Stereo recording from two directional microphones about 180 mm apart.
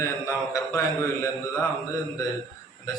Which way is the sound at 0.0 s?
15° left (ahead or behind).